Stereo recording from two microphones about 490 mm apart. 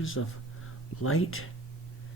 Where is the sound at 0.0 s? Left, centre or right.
Left.